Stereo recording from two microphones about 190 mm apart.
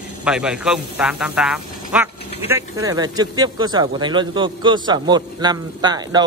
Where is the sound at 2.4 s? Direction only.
15° right (ahead or behind).